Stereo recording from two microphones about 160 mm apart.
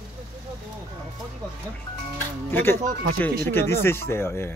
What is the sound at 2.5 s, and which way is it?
Speech, 15° left (ahead or behind).